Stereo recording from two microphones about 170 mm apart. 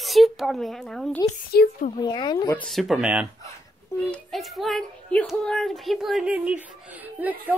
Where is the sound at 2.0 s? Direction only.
25° left (ahead or behind).